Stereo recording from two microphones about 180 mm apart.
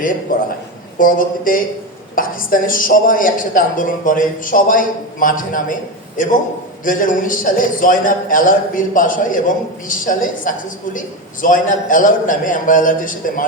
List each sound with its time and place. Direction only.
0.3 s a woman's voice: 50° left (ahead or behind)
6.8 s a woman's voice: 50° left (ahead or behind)